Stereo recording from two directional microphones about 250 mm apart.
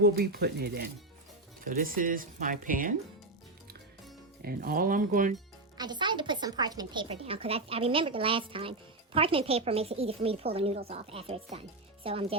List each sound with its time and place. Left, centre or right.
0.0 s speech: right
4.4 s speech: right
5.7 s a woman's voice: centre